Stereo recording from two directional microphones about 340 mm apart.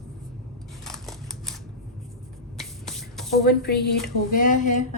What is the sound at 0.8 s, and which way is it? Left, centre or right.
Scissors, centre.